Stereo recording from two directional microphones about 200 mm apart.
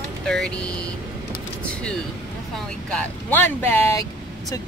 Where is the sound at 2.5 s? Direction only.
5° left (ahead or behind).